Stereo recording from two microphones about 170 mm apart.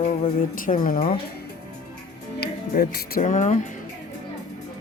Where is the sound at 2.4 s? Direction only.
65° left (ahead or behind).